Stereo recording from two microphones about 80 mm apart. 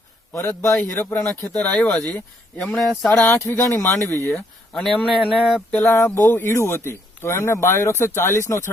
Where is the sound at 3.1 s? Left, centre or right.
Left.